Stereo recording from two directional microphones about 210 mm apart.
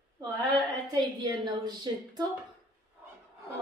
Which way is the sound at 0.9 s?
20° right (ahead or behind).